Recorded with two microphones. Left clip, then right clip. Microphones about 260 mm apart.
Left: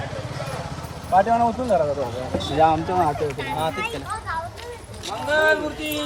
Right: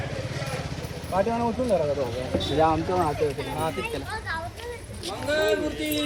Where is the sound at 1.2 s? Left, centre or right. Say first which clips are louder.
Left 7 dB; left.